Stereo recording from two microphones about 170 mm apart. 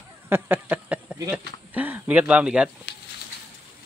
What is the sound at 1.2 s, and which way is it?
Speech, 10° right (ahead or behind).